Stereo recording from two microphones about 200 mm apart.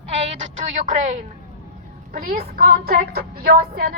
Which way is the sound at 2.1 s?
45° right (ahead or behind).